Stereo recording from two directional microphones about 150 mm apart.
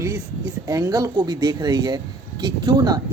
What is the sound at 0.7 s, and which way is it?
Speech, 25° right (ahead or behind).